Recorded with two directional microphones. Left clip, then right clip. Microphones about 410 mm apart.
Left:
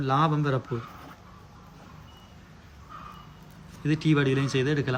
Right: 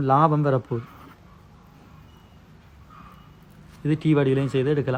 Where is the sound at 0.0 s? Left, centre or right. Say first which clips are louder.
Right 6 dB; centre.